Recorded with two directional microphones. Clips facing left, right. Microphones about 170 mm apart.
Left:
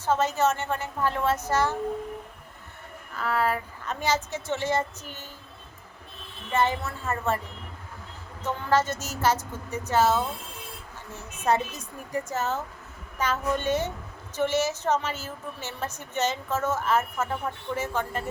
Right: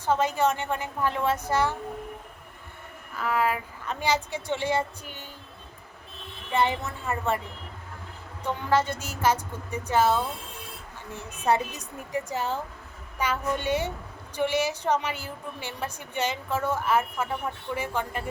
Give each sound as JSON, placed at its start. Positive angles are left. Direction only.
{"t": 0.0, "sound": "a woman's voice", "side_deg": -15}
{"t": 3.2, "sound": "a woman's voice", "side_deg": -10}
{"t": 6.5, "sound": "a woman's voice", "side_deg": -15}
{"t": 8.4, "sound": "a woman's voice", "side_deg": -15}
{"t": 11.5, "sound": "a woman's voice", "side_deg": -10}